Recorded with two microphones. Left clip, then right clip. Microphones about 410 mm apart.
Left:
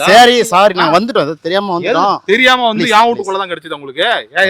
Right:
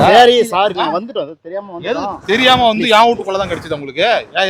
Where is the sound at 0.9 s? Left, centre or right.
Left.